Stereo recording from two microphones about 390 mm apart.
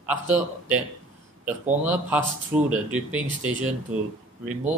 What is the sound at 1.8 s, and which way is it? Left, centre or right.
Speech, centre.